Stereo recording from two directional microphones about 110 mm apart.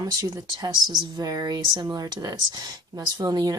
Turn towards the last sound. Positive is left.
turn(degrees=-35)  # may be behind; listen again after turning